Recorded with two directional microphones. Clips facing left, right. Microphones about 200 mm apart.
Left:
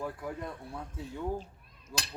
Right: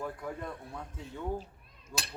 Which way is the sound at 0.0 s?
5° left (ahead or behind).